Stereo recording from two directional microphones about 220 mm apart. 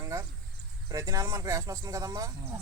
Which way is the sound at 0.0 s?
15° right (ahead or behind).